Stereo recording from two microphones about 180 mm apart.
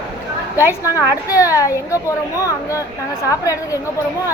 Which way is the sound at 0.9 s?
20° left (ahead or behind).